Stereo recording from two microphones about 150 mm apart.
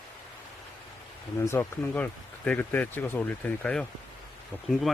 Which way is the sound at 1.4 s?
15° left (ahead or behind).